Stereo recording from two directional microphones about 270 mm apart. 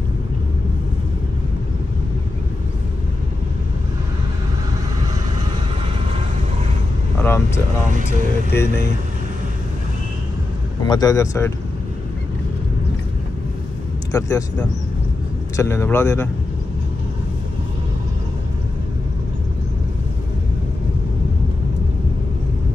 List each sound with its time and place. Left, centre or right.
7.2 s vehicle: centre
10.9 s speech: centre
14.1 s speech: centre